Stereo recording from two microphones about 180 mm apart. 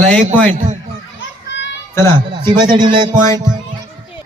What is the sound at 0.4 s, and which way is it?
Speech, 40° right (ahead or behind).